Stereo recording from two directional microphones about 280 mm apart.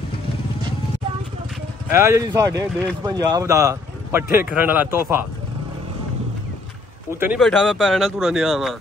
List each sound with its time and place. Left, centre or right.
1.9 s speech: centre
7.2 s speech: centre